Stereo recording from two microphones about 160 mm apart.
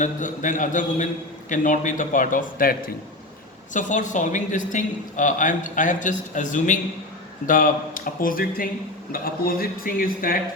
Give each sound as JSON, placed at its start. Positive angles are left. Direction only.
{"t": 0.0, "sound": "a man's voice", "side_deg": 50}
{"t": 3.7, "sound": "a man's voice", "side_deg": 50}